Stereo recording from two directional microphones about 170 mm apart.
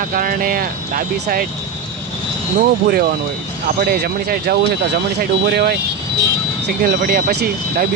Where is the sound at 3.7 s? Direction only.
60° right (ahead or behind).